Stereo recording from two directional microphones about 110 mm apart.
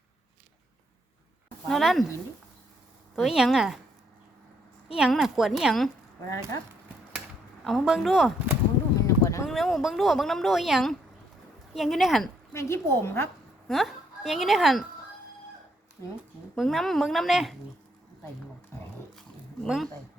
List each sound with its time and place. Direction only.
1.6 s speech: centre (ahead or behind)
3.2 s speech: 5° right (ahead or behind)
4.9 s speech: 5° right (ahead or behind)
7.6 s speech: 5° right (ahead or behind)
9.0 s a sound: 30° left (ahead or behind)
9.4 s speech: centre (ahead or behind)
12.5 s a woman's voice: 25° left (ahead or behind)
13.7 s a woman's voice: centre (ahead or behind)
16.6 s speech: centre (ahead or behind)
19.6 s speech: 5° right (ahead or behind)